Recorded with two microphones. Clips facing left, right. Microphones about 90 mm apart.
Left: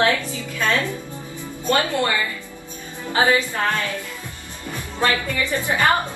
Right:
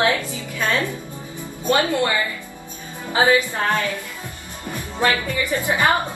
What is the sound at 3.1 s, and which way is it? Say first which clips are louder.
Speech: right 1 dB; 20° right (ahead or behind).